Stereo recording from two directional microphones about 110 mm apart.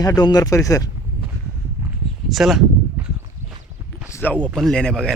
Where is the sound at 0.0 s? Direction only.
35° left (ahead or behind).